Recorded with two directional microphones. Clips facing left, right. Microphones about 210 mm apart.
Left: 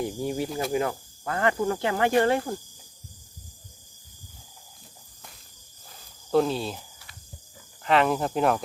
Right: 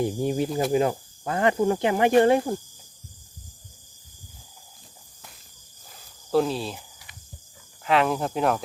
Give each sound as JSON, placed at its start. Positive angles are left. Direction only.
{"t": 0.0, "sound": "speech", "side_deg": -25}
{"t": 6.3, "sound": "speech", "side_deg": 0}